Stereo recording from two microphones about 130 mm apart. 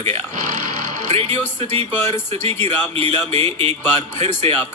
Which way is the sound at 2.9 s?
45° right (ahead or behind).